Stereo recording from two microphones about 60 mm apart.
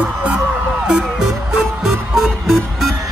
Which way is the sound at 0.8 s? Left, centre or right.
Centre.